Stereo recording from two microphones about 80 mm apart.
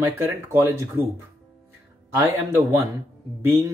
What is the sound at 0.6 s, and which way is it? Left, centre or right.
Speech, right.